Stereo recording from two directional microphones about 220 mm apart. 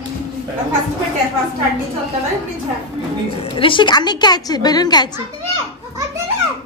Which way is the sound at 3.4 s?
25° left (ahead or behind).